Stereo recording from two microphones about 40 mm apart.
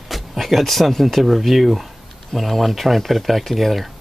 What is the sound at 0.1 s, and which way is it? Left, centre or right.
Speech, centre.